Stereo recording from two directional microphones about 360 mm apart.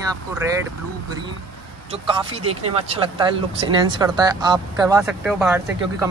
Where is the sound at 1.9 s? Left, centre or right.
Centre.